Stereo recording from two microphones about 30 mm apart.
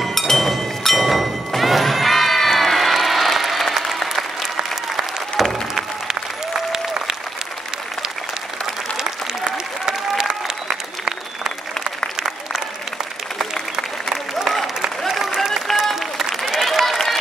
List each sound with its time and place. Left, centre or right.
0.0 s chink: centre
0.3 s a sound: centre
2.5 s applause: centre
5.4 s music: centre
6.7 s applause: centre
8.9 s applause: right
15.1 s applause: centre